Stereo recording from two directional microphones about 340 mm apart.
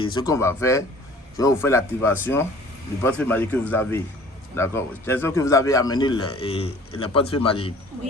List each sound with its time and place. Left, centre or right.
0.0 s a man's voice: centre